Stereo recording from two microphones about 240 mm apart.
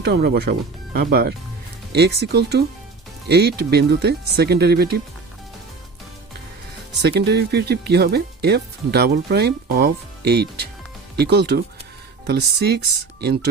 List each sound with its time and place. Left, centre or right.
0.0 s speech: right
7.0 s speech: right